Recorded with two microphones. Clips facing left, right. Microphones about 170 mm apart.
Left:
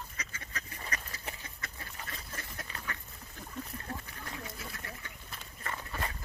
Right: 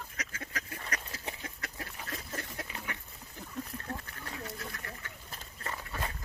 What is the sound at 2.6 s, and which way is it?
Duck, 20° right (ahead or behind).